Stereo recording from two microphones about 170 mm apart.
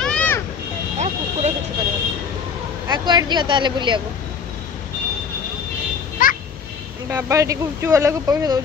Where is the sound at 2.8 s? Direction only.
25° right (ahead or behind).